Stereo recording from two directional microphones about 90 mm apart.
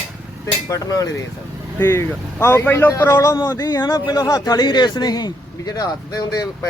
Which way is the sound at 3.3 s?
45° left (ahead or behind).